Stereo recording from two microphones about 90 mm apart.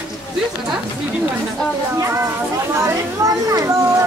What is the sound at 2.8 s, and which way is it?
Speech, 40° right (ahead or behind).